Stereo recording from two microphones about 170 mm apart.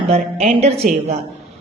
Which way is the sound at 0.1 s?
40° right (ahead or behind).